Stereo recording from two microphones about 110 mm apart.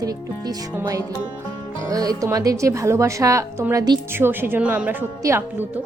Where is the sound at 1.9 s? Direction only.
35° right (ahead or behind).